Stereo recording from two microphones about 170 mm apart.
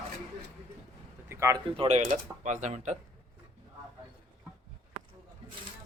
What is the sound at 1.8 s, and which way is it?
Speech, 40° right (ahead or behind).